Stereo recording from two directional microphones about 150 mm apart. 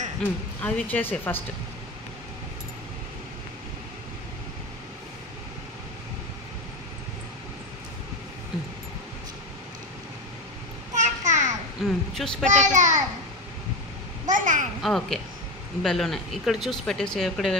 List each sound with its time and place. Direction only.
0.2 s speech: 10° left (ahead or behind)
11.0 s a sound: 55° right (ahead or behind)
11.8 s a sound: centre (ahead or behind)
12.4 s a child's voice: 55° right (ahead or behind)
14.2 s a child's voice: 60° right (ahead or behind)
14.8 s speech: 5° left (ahead or behind)